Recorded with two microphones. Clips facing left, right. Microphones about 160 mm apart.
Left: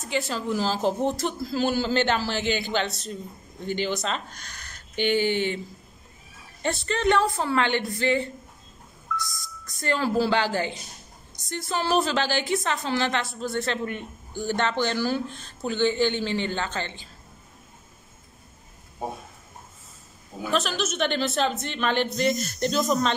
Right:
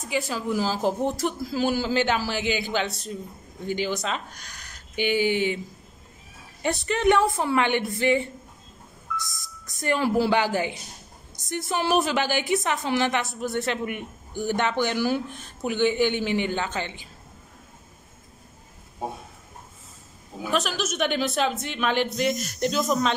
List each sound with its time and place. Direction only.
0.1 s a woman's voice: 10° right (ahead or behind)
6.6 s a woman's voice: 15° right (ahead or behind)
20.5 s a woman's voice: 10° right (ahead or behind)